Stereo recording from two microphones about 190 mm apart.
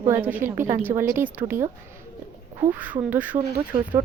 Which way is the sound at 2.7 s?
10° right (ahead or behind).